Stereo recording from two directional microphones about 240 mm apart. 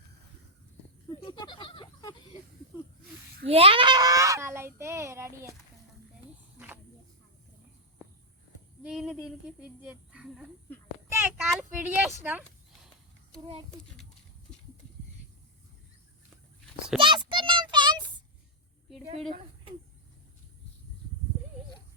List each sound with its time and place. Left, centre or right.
1.2 s a sound: centre
3.4 s a child's voice: right
8.8 s speech: centre
17.0 s child singing: right